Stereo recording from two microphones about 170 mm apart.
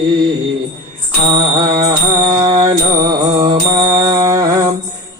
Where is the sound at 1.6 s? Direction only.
25° right (ahead or behind).